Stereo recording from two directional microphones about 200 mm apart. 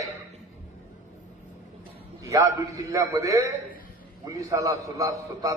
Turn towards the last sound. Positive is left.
turn(degrees=-15)  # may be behind; listen again after turning